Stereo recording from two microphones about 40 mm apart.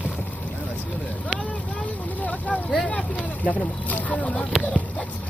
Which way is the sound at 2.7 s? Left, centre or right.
Left.